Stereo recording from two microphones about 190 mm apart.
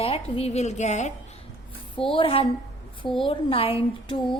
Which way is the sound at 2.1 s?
30° left (ahead or behind).